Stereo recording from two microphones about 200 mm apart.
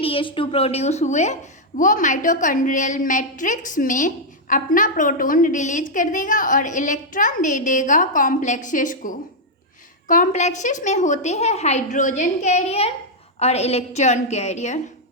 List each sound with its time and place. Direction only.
0.0 s a woman's voice: 25° left (ahead or behind)